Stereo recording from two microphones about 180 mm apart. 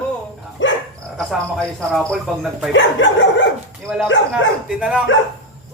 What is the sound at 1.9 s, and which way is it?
Speech, 5° left (ahead or behind).